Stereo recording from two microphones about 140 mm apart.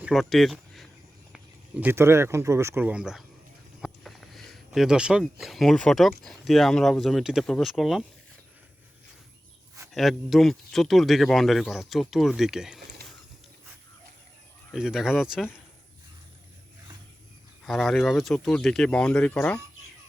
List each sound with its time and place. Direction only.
0.0 s speech: centre (ahead or behind)
1.8 s speech: 15° right (ahead or behind); by 8.0 s centre (ahead or behind)
9.9 s speech: centre (ahead or behind)
14.7 s speech: 5° right (ahead or behind)
17.6 s speech: centre (ahead or behind)